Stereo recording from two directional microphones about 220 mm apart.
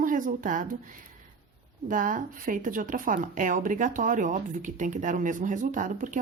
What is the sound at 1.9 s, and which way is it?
Speech, 35° right (ahead or behind).